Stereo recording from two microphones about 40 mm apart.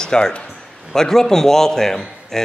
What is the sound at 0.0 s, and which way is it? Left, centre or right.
Speech, left.